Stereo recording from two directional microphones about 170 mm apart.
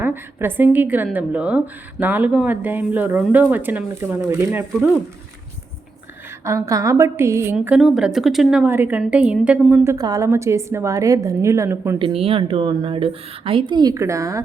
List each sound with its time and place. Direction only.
0.0 s a woman's voice: 10° right (ahead or behind)
6.4 s a woman's voice: 20° right (ahead or behind)
7.5 s a woman's voice: 5° right (ahead or behind)
11.9 s a woman's voice: 30° right (ahead or behind)